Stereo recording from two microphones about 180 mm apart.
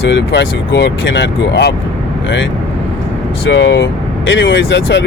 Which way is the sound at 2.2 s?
90° left.